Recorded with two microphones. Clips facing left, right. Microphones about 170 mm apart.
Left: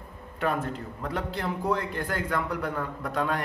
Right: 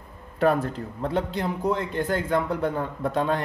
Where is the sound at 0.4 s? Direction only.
35° right (ahead or behind).